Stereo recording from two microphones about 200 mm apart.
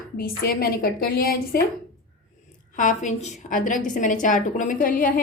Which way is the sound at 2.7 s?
40° left (ahead or behind).